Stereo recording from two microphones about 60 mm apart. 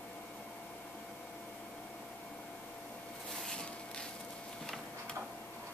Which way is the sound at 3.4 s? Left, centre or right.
Centre.